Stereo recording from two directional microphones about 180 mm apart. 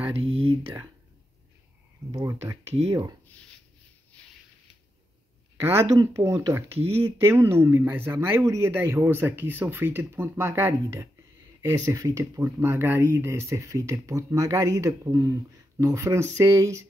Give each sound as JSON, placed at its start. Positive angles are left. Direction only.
{"t": 0.0, "sound": "speech", "side_deg": -35}
{"t": 2.1, "sound": "speech", "side_deg": -20}
{"t": 5.6, "sound": "speech", "side_deg": -15}